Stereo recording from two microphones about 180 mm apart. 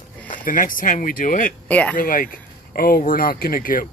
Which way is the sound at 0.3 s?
50° left (ahead or behind).